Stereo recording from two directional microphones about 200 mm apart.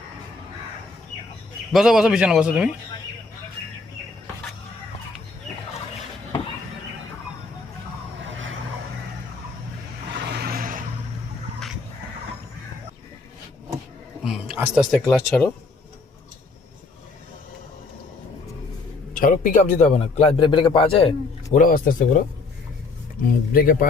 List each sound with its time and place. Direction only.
1.7 s a man's voice: centre (ahead or behind)
10.2 s vehicle: 55° right (ahead or behind)
14.3 s speech: 5° right (ahead or behind)
19.1 s a man's voice: 40° left (ahead or behind)
21.5 s speech: 45° left (ahead or behind)
23.6 s speech: 45° left (ahead or behind)